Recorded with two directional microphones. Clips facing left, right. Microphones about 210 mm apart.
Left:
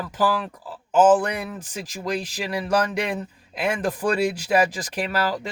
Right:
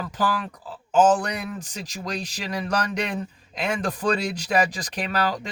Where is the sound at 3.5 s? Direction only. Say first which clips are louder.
Left 2 dB; 5° left (ahead or behind).